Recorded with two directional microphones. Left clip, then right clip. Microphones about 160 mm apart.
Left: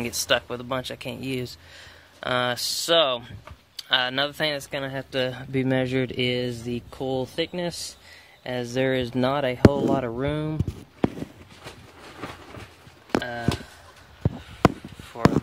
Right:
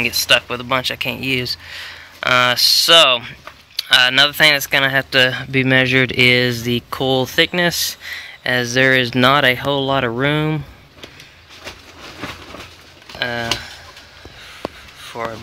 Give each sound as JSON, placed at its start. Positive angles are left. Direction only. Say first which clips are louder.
{"t": 0.0, "sound": "speech", "louder": "right 9 dB", "side_deg": 25}
{"t": 13.2, "sound": "a sound", "louder": "right 10 dB", "side_deg": -20}
{"t": 15.2, "sound": "speech", "louder": "left 3 dB", "side_deg": -5}